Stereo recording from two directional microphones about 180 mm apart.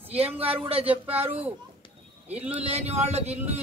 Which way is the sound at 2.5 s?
35° right (ahead or behind).